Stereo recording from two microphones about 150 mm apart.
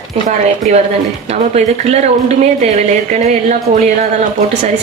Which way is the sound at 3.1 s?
50° right (ahead or behind).